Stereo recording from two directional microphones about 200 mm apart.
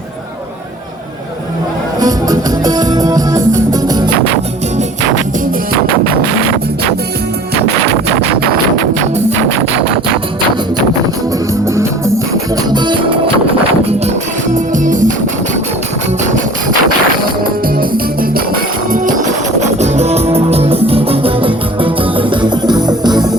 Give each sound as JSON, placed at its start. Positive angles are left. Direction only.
{"t": 2.0, "sound": "music", "side_deg": -20}
{"t": 11.5, "sound": "music", "side_deg": -15}
{"t": 14.5, "sound": "music", "side_deg": -40}
{"t": 17.7, "sound": "music", "side_deg": -45}